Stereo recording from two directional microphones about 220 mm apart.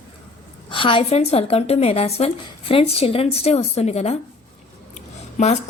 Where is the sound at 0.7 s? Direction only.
25° left (ahead or behind).